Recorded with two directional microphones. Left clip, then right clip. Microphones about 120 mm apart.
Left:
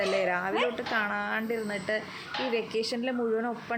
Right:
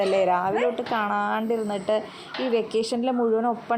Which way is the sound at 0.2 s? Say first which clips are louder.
Right 6 dB; 25° right (ahead or behind).